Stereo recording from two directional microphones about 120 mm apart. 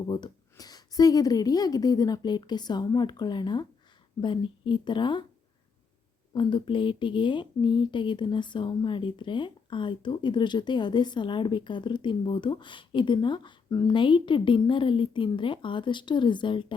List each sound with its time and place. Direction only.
0.1 s speech: 35° left (ahead or behind)
6.3 s speech: 40° left (ahead or behind)